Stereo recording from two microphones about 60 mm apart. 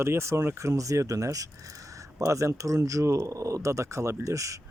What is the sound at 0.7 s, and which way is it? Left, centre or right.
Speech, right.